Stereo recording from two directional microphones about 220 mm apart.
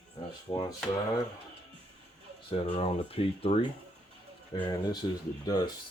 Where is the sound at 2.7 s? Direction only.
25° left (ahead or behind).